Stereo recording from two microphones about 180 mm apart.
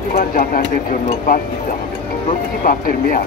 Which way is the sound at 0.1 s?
50° left (ahead or behind).